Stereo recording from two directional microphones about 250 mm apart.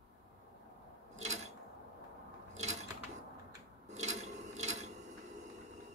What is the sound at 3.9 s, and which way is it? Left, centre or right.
Filing, right.